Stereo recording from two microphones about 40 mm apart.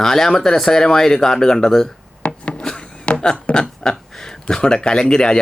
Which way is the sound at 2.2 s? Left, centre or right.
Left.